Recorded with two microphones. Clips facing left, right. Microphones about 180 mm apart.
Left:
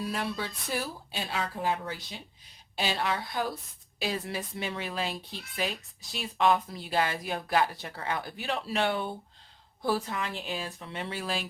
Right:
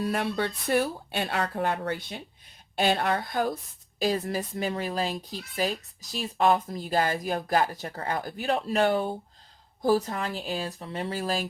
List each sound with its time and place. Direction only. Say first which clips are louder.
0.3 s a woman's voice: right 8 dB; 60° right (ahead or behind); by 11.4 s 40° right (ahead or behind)